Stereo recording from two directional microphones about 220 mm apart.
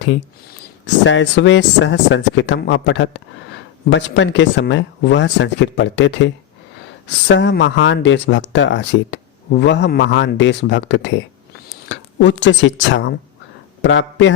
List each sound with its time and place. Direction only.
1.0 s speech: 60° left (ahead or behind)